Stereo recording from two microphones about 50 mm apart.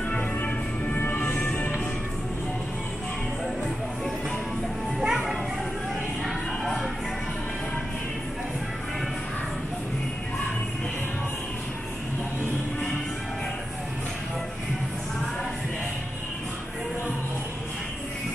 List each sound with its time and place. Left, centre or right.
0.1 s music: left
5.0 s music: centre